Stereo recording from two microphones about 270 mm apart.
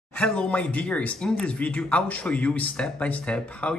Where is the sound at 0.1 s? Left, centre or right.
Centre.